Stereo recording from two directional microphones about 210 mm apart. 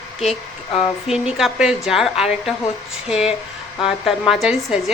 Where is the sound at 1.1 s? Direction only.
Centre (ahead or behind).